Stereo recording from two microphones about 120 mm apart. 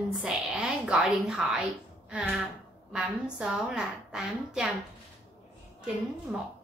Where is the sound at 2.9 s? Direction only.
5° right (ahead or behind).